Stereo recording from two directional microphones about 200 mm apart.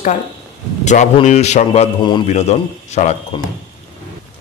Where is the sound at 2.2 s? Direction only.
35° left (ahead or behind).